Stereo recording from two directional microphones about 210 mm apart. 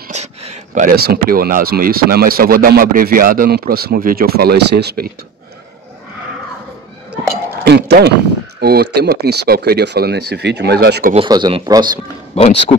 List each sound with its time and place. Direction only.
0.1 s speech: 30° right (ahead or behind); by 5.1 s 50° right (ahead or behind)
7.6 s speech: 50° right (ahead or behind)
11.1 s speech: 20° right (ahead or behind)
12.4 s speech: 30° left (ahead or behind)